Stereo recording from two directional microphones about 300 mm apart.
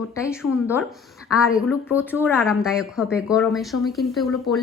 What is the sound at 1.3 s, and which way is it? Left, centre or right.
Speech, centre.